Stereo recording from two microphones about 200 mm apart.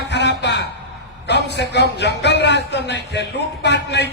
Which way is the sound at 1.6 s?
55° left (ahead or behind).